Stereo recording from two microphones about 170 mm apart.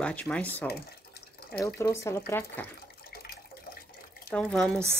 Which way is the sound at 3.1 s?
65° left (ahead or behind).